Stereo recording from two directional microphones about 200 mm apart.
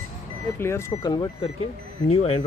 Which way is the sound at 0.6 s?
15° left (ahead or behind).